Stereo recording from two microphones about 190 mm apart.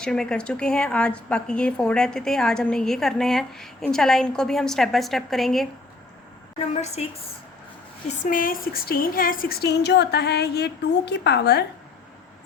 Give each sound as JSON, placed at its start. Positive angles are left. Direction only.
{"t": 0.0, "sound": "a woman's voice", "side_deg": 5}
{"t": 6.6, "sound": "a woman's voice", "side_deg": 35}
{"t": 8.0, "sound": "a woman's voice", "side_deg": 45}